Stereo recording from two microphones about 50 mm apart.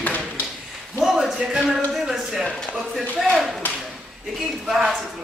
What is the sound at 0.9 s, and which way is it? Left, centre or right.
A man's voice, centre.